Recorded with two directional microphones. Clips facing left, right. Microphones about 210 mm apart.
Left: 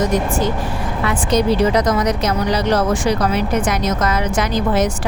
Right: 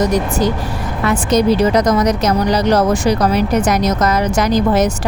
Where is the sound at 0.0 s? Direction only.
40° right (ahead or behind).